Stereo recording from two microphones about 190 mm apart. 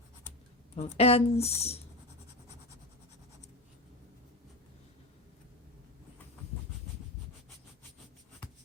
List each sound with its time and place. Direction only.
0.8 s speech: 30° left (ahead or behind)